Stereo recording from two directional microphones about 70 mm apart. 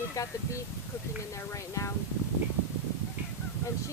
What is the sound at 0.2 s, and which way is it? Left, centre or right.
Speech, left.